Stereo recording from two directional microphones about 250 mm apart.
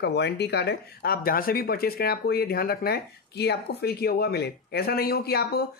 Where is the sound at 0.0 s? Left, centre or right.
Left.